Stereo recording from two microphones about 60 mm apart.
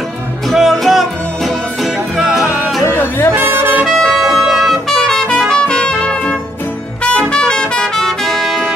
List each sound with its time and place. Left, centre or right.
0.5 s music: centre
2.8 s music: left
3.3 s music: right
3.8 s music: centre
4.8 s trumpet: centre
5.5 s music: centre
7.0 s brass instrument: centre